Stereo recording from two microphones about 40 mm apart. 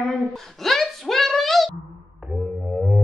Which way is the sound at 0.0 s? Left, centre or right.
Centre.